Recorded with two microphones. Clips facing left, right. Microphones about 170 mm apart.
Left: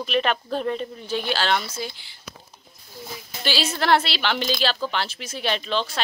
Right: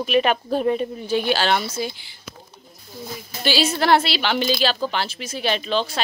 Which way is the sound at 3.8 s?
5° right (ahead or behind).